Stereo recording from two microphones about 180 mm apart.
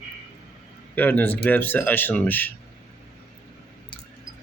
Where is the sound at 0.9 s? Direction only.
10° left (ahead or behind).